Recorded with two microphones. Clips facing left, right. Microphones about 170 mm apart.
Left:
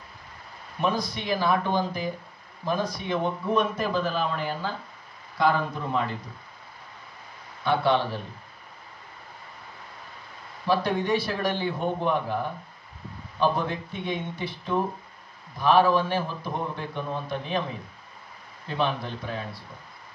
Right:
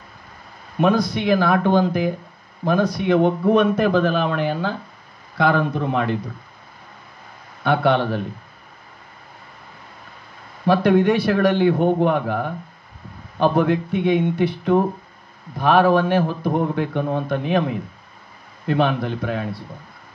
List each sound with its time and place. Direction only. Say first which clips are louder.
0.7 s a man's voice: right 9 dB; 60° right (ahead or behind)
7.6 s a man's voice: right 5 dB; 60° right (ahead or behind)
10.6 s a man's voice: right 9 dB; 60° right (ahead or behind)